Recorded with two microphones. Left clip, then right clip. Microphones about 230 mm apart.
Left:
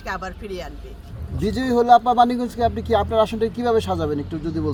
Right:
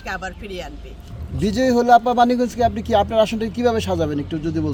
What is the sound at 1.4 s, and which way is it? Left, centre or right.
Speech, right.